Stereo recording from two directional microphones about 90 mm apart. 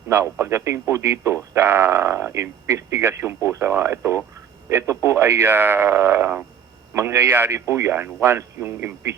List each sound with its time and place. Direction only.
0.1 s speech: 30° right (ahead or behind)